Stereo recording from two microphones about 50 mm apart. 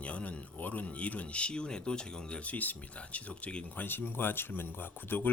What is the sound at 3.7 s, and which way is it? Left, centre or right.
Speech, left.